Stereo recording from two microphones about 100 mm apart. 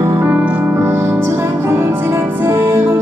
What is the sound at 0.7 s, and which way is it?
Music, 25° right (ahead or behind).